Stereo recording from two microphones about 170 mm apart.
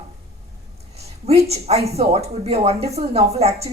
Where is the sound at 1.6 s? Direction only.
40° right (ahead or behind).